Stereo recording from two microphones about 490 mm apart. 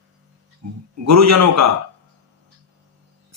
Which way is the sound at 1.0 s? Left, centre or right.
Right.